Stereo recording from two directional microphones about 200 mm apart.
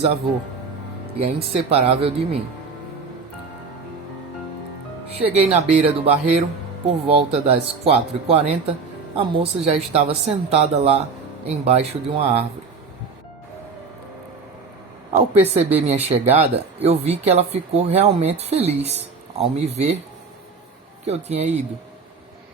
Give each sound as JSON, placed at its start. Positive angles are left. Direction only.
{"t": 1.1, "sound": "speech", "side_deg": -30}
{"t": 5.3, "sound": "speech", "side_deg": -30}
{"t": 15.1, "sound": "speech", "side_deg": -35}
{"t": 21.0, "sound": "speech", "side_deg": -30}